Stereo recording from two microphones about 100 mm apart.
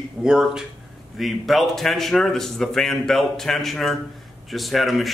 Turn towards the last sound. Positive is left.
turn(degrees=0)  # may be behind; listen again after turning